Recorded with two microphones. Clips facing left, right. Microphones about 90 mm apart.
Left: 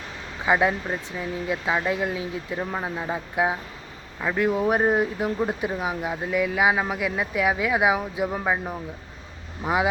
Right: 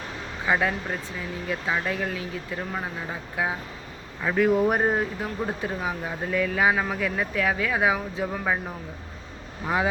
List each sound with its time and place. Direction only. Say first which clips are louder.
0.4 s speech: left 3 dB; 15° left (ahead or behind)
4.2 s speech: right 2 dB; centre (ahead or behind)
5.2 s speech: left 4 dB; 15° left (ahead or behind)